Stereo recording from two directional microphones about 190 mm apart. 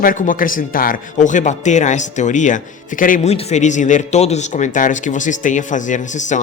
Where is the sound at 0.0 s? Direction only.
45° left (ahead or behind).